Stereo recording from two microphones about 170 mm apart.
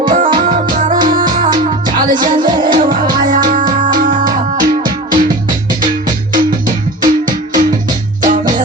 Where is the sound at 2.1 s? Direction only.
50° right (ahead or behind).